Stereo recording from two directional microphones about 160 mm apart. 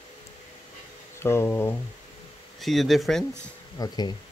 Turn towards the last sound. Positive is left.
turn(degrees=25)  # may be behind; listen again after turning